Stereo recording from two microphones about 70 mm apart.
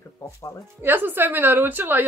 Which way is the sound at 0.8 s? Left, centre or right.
Right.